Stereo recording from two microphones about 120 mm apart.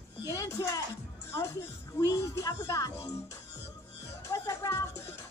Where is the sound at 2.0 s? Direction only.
30° left (ahead or behind).